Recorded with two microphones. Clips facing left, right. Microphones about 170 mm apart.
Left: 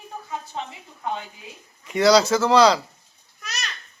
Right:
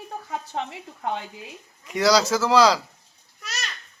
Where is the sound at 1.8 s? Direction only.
Centre (ahead or behind).